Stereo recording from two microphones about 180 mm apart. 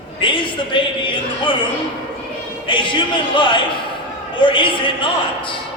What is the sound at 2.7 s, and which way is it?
A man's voice, 25° left (ahead or behind).